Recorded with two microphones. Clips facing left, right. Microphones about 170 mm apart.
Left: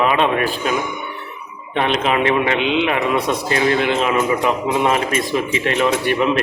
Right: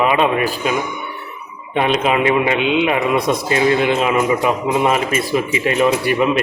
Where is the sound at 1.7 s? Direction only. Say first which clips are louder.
Right 2 dB; 15° right (ahead or behind).